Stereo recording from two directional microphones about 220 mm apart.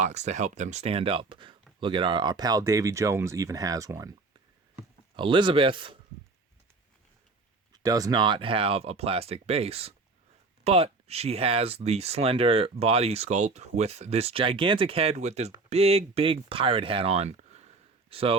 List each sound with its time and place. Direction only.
0.0 s speech: 30° right (ahead or behind); by 4.1 s 15° right (ahead or behind)
5.1 s speech: 20° right (ahead or behind)
7.7 s speech: 15° right (ahead or behind)